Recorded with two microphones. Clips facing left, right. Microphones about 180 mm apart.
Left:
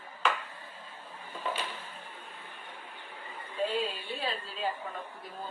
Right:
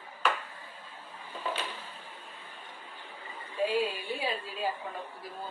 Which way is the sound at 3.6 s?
10° right (ahead or behind).